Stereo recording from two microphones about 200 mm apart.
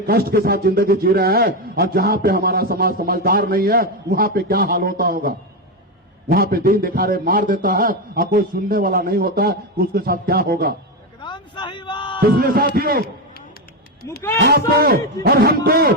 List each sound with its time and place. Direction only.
0.1 s a man's voice: 50° right (ahead or behind)
6.3 s a man's voice: 50° right (ahead or behind)
11.2 s a sound: 25° left (ahead or behind)
12.2 s a man's voice: 50° right (ahead or behind)
14.3 s a man's voice: 50° right (ahead or behind)